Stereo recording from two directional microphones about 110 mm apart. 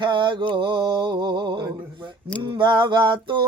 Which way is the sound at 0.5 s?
45° right (ahead or behind).